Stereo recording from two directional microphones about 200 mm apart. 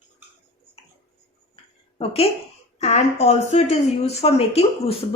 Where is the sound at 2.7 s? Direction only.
35° left (ahead or behind).